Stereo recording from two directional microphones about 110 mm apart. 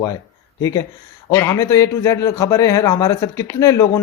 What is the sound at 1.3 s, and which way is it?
A man's voice, 25° left (ahead or behind).